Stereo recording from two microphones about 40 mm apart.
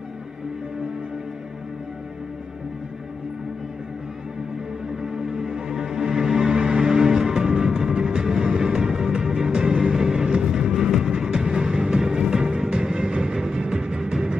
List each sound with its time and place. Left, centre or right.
5.0 s music: right